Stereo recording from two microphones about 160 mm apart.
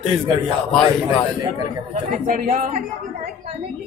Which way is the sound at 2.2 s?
55° right (ahead or behind).